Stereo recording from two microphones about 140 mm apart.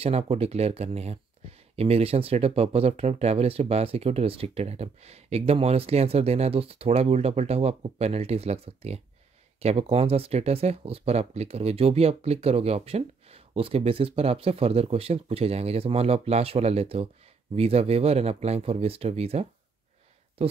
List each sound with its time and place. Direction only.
0.0 s speech: 45° right (ahead or behind)